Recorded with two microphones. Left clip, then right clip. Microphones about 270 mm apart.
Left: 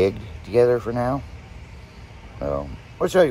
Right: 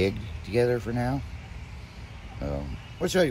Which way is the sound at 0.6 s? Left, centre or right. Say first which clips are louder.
Left 7 dB; left.